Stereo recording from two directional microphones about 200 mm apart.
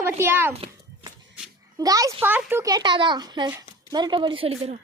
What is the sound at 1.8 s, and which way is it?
A woman's voice, 15° right (ahead or behind).